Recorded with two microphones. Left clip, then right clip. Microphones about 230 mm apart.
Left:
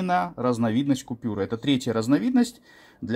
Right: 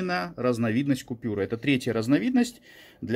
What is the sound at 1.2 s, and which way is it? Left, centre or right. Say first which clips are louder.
Speech: left 1 dB; left.